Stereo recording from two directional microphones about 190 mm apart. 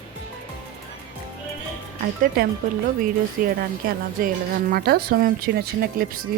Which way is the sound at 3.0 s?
50° right (ahead or behind).